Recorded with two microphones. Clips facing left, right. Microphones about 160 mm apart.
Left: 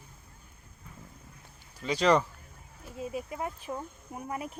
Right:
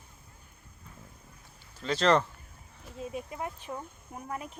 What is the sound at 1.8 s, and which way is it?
Speech, 10° left (ahead or behind).